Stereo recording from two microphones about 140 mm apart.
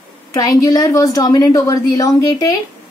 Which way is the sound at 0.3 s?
25° left (ahead or behind).